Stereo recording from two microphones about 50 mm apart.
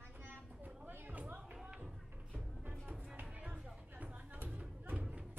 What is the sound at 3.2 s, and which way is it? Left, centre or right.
Music, right.